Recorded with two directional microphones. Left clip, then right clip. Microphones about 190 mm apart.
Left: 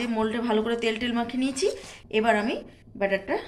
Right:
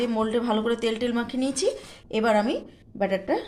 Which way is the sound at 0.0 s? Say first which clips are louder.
Right 2 dB; 50° right (ahead or behind).